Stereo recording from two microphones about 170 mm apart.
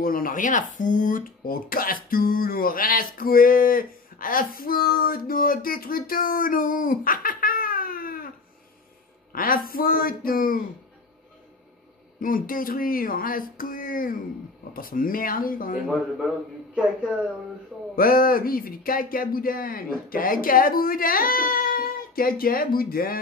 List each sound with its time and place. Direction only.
0.0 s speech: 55° left (ahead or behind)
9.3 s speech: 55° left (ahead or behind)
12.2 s speech: 55° left (ahead or behind)
17.9 s speech: 60° left (ahead or behind)